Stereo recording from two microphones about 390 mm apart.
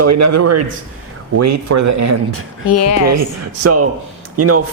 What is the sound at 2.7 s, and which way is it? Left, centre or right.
Speech, left.